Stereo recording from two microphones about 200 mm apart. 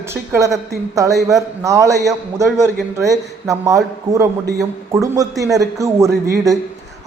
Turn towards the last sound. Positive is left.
turn(degrees=-15)  # may be behind; listen again after turning